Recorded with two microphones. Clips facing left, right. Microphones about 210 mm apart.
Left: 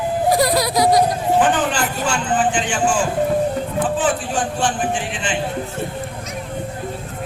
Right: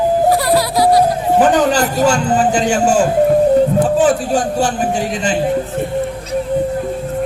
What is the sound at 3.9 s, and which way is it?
A man's voice, 40° right (ahead or behind).